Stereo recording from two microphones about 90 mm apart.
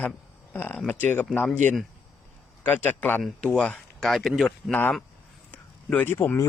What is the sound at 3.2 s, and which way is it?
A man's voice, 10° left (ahead or behind).